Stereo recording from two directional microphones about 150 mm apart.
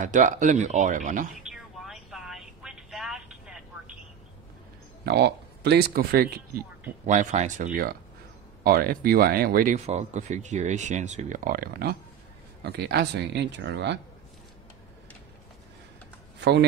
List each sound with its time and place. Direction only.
0.0 s speech: 55° right (ahead or behind)
1.4 s vehicle: 5° right (ahead or behind)
5.0 s speech: 90° right
7.1 s speech: 50° right (ahead or behind); by 8.0 s 70° right (ahead or behind)
8.6 s speech: 85° right
9.8 s speech: 50° right (ahead or behind); by 13.2 s 90° right